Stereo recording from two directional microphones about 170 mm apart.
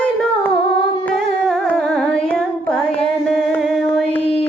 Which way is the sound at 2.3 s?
5° left (ahead or behind).